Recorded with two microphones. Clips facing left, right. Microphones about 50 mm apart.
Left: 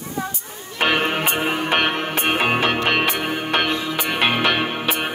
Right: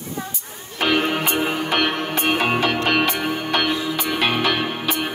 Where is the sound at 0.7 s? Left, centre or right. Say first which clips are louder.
Even; left.